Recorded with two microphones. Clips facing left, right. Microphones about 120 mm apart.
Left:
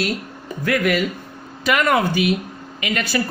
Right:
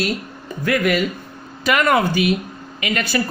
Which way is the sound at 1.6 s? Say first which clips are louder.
Right 1 dB; 50° right (ahead or behind).